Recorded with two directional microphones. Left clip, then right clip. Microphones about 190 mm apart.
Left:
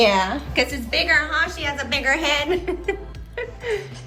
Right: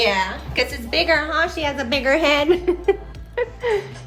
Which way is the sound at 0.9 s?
20° right (ahead or behind).